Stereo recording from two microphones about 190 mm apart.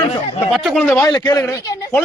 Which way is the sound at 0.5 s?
Centre (ahead or behind).